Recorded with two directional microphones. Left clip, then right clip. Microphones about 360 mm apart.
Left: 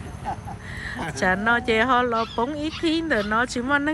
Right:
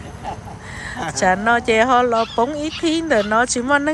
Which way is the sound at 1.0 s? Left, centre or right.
Centre.